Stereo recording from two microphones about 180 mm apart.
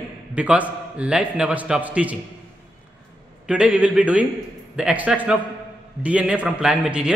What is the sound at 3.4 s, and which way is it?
A man's voice, 5° right (ahead or behind).